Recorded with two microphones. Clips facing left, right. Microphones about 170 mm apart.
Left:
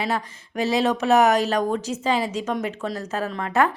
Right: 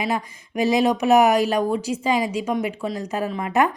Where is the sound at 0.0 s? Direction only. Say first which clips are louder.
Right 1 dB; 10° right (ahead or behind).